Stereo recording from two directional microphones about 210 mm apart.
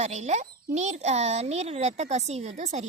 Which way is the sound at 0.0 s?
35° right (ahead or behind).